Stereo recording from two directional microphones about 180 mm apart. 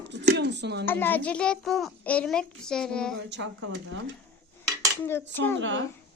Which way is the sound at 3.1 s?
85° right.